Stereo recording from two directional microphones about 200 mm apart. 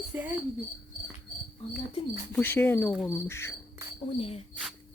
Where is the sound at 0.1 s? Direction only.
10° right (ahead or behind).